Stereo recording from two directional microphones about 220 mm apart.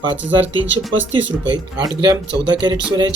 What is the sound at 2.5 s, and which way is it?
Speech, 20° right (ahead or behind).